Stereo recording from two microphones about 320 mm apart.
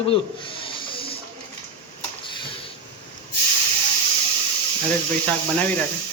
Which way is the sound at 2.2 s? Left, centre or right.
Centre.